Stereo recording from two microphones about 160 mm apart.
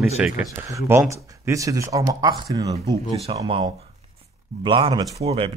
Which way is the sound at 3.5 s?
40° right (ahead or behind).